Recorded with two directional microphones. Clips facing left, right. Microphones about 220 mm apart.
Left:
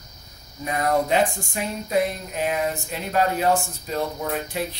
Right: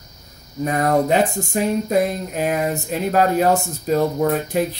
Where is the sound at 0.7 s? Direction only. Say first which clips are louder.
Right 3 dB; 45° right (ahead or behind).